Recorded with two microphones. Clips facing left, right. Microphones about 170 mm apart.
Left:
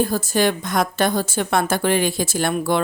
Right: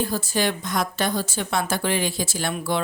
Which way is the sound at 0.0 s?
45° left (ahead or behind).